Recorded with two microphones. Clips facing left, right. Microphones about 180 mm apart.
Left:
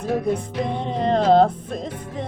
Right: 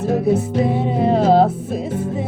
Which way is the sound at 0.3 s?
5° right (ahead or behind).